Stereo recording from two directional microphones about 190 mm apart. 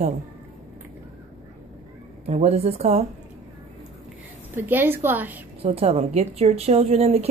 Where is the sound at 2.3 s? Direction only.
35° right (ahead or behind).